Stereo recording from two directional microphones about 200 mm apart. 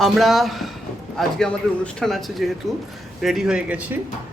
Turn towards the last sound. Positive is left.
turn(degrees=-10)  # may be behind; listen again after turning